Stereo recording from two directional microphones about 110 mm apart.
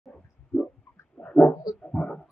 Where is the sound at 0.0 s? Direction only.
5° left (ahead or behind).